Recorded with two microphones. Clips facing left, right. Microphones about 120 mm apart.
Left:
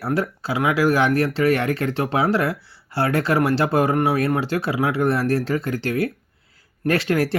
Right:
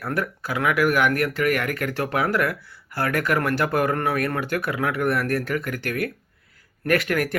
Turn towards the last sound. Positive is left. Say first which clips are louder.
# left 2 dB
turn(degrees=25)  # may be behind; listen again after turning